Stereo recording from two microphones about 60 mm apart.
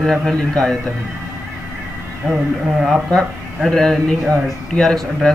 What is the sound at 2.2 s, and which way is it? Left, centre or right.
Speech, centre.